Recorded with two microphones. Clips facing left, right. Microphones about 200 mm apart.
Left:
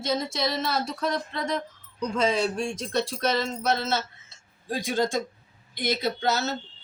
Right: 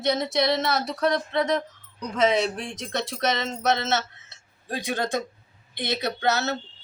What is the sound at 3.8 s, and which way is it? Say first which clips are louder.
A woman's voice: right 2 dB; 70° right (ahead or behind).